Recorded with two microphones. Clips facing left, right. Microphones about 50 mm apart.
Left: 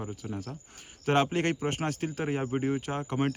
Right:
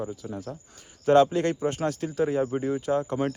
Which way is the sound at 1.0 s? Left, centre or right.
Left.